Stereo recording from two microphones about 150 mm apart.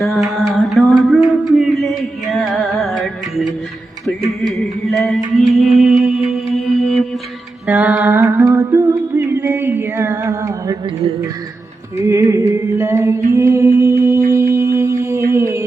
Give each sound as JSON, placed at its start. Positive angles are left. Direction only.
{"t": 0.0, "sound": "music", "side_deg": 0}
{"t": 4.4, "sound": "music", "side_deg": 0}
{"t": 7.7, "sound": "a sound", "side_deg": -10}
{"t": 11.9, "sound": "music", "side_deg": -20}